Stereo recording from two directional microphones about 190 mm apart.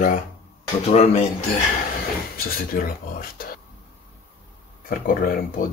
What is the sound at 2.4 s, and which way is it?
Speech, 50° left (ahead or behind).